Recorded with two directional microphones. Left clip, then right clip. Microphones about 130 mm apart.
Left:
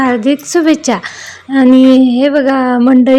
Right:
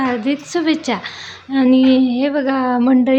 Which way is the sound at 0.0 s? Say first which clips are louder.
Left 7 dB; 55° left (ahead or behind).